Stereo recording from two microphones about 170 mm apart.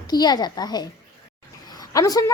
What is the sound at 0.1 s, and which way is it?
A woman's voice, 25° left (ahead or behind).